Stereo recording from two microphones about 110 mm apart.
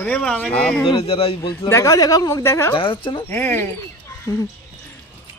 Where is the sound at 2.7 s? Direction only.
50° left (ahead or behind).